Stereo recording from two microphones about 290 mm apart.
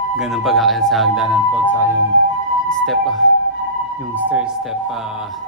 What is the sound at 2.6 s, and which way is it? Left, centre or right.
Music, centre.